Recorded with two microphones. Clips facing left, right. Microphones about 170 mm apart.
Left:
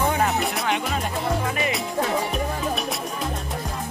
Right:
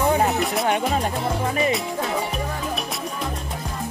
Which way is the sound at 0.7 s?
45° right (ahead or behind).